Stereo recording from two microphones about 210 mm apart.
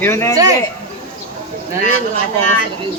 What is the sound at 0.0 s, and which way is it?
Speech, 10° left (ahead or behind).